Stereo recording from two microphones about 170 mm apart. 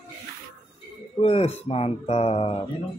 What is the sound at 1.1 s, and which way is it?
Speech, 35° left (ahead or behind).